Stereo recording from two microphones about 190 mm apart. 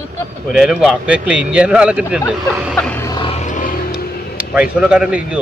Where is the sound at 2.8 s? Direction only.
5° left (ahead or behind).